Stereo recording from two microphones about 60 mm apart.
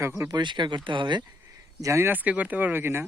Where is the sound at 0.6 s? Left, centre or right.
Right.